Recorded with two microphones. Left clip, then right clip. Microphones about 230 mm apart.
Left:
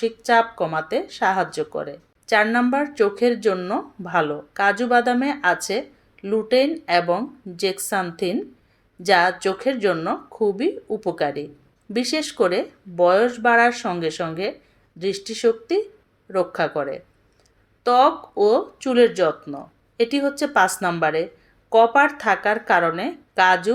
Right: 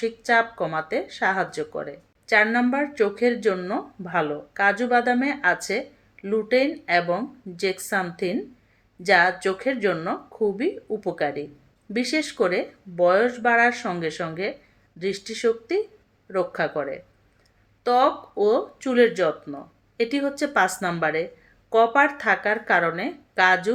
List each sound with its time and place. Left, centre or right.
0.0 s speech: centre